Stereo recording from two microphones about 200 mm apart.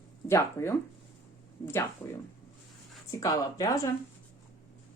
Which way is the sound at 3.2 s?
15° left (ahead or behind).